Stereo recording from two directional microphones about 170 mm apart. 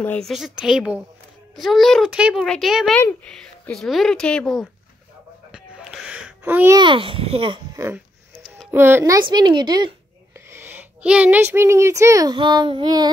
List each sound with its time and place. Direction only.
0.0 s a woman's voice: 10° left (ahead or behind)
0.3 s speech: centre (ahead or behind)
5.5 s a sound: 5° right (ahead or behind)
6.8 s a child's voice: 30° right (ahead or behind)
7.7 s a child's voice: 15° right (ahead or behind)
10.5 s speech: 15° right (ahead or behind)